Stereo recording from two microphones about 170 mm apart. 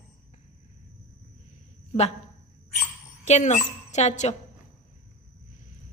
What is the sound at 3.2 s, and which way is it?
A woman's voice, 40° left (ahead or behind).